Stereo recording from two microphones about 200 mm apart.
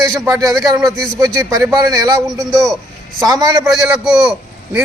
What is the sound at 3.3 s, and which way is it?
Speech, 20° right (ahead or behind).